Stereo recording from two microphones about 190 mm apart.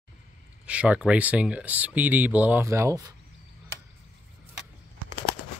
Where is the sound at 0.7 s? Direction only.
5° right (ahead or behind).